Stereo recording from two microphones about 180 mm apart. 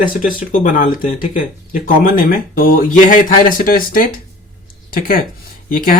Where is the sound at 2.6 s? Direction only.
50° left (ahead or behind).